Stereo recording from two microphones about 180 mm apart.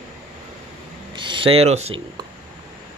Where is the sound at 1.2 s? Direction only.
30° right (ahead or behind).